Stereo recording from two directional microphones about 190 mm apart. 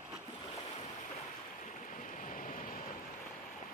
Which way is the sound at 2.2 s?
45° left (ahead or behind).